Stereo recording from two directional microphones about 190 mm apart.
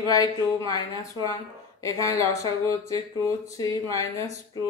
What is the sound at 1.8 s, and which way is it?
Speech, 15° left (ahead or behind).